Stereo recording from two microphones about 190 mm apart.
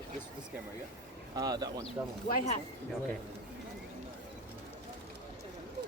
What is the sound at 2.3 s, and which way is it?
Speech, 45° left (ahead or behind).